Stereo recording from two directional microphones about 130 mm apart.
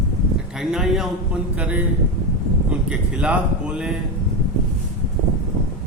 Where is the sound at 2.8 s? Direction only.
10° right (ahead or behind).